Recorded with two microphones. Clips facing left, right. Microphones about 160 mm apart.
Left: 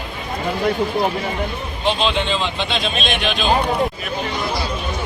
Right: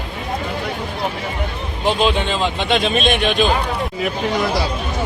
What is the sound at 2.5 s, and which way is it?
Speech, 55° right (ahead or behind).